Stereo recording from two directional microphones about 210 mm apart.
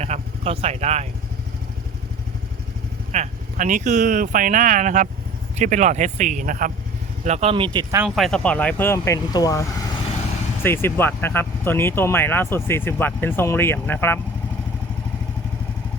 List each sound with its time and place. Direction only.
0.0 s vehicle: 30° right (ahead or behind)
3.1 s speech: 35° right (ahead or behind)
7.3 s speech: 30° right (ahead or behind)
8.0 s speech: centre (ahead or behind)